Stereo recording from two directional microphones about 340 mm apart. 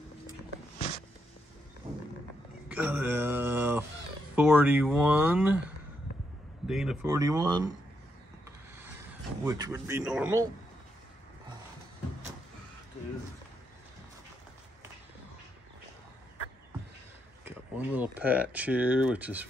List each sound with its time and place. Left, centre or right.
0.7 s a sound: centre
2.7 s a sound: centre
4.4 s speech: centre
6.7 s speech: centre
9.4 s speech: centre
17.5 s speech: centre